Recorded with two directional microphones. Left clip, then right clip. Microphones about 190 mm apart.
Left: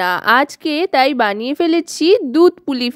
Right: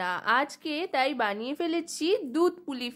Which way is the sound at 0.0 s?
50° left (ahead or behind).